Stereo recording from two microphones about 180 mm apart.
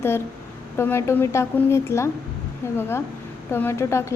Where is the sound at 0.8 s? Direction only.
15° left (ahead or behind).